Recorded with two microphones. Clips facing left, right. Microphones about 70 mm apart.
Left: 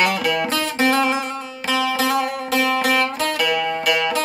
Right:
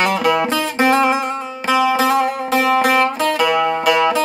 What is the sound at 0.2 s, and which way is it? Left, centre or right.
Music, centre.